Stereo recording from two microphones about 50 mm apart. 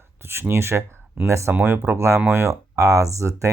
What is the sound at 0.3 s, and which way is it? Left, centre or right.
Speech, right.